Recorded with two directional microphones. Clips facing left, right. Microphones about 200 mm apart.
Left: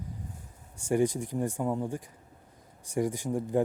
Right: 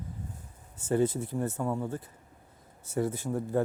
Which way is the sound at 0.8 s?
15° left (ahead or behind).